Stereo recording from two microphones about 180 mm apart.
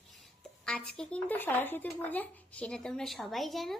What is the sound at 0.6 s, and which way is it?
Speech, 5° left (ahead or behind).